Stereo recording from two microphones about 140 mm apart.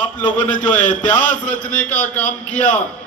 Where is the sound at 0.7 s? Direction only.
70° left (ahead or behind).